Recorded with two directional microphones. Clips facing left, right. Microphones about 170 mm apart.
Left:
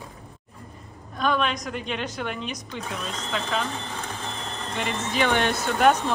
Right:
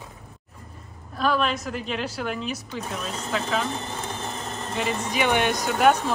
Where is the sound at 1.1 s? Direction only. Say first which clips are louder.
Right 1 dB; centre (ahead or behind).